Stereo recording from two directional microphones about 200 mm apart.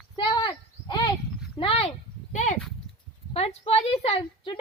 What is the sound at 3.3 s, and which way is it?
A woman's voice, 30° left (ahead or behind).